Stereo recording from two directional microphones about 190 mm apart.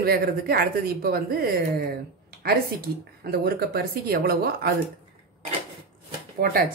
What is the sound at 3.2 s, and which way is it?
Speech, 55° right (ahead or behind).